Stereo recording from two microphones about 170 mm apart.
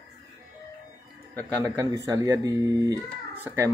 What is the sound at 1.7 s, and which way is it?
Speech, 20° right (ahead or behind).